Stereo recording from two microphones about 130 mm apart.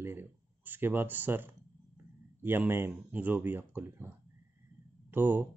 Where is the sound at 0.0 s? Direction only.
15° right (ahead or behind).